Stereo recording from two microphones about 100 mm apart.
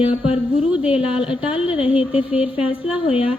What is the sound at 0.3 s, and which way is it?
Speech, 10° right (ahead or behind).